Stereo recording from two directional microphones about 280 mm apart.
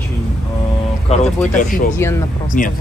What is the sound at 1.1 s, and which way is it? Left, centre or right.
Speech, left.